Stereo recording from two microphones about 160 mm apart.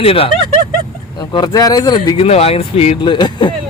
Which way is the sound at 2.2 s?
40° left (ahead or behind).